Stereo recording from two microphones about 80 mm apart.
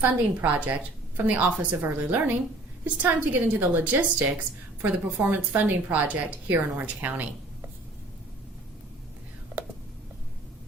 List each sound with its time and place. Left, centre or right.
0.0 s a woman's voice: centre
9.6 s whispering: right